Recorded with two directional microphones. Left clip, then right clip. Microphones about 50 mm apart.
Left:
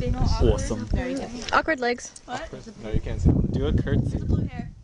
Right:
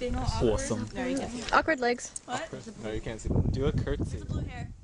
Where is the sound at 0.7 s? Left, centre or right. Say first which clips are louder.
Left 3 dB; centre.